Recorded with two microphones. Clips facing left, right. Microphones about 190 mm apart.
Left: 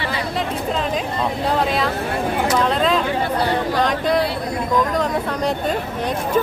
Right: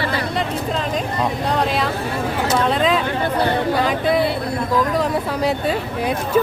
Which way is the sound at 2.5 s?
Centre (ahead or behind).